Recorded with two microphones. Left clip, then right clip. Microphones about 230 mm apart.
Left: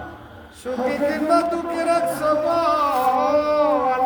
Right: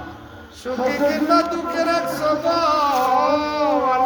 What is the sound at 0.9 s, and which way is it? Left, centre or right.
Music, centre.